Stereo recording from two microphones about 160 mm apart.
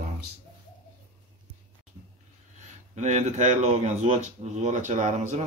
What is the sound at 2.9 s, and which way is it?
Speech, 50° right (ahead or behind).